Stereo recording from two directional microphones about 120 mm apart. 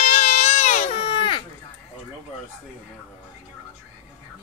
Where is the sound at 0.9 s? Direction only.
45° left (ahead or behind).